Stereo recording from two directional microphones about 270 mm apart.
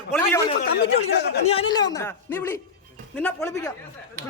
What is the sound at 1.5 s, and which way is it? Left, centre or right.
A man's voice, centre.